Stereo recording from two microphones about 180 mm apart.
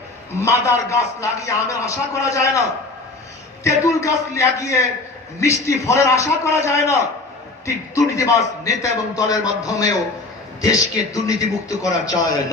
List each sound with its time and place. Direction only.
0.3 s a man's voice: 15° left (ahead or behind)
3.6 s a man's voice: 15° left (ahead or behind)